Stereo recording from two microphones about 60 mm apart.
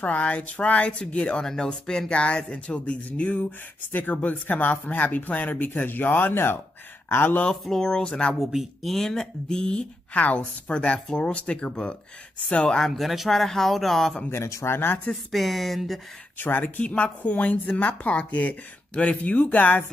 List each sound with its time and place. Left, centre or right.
0.0 s speech: left
7.6 s speech: centre
8.5 s speech: centre
10.1 s speech: left; by 14.2 s centre
14.3 s speech: left
15.3 s speech: centre
16.3 s speech: left